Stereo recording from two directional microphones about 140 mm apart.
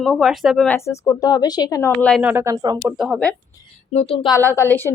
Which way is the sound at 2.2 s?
15° right (ahead or behind).